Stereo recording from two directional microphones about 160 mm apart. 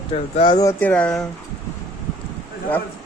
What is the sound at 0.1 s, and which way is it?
Speech, 40° left (ahead or behind).